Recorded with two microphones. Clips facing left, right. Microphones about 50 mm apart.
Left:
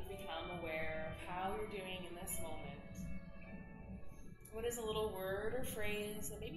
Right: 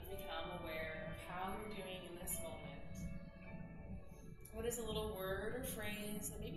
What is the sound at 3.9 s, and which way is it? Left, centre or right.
Music, left.